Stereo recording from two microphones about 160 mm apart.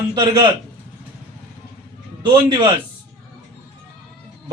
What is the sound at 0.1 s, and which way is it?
Speech, 30° right (ahead or behind).